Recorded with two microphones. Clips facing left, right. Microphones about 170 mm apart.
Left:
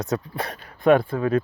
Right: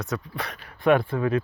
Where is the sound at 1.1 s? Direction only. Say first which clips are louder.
Left 2 dB; 30° left (ahead or behind).